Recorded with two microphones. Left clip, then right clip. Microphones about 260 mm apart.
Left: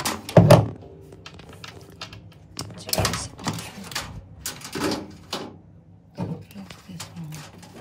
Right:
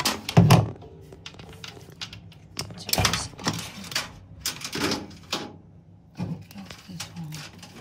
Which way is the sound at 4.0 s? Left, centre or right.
Centre.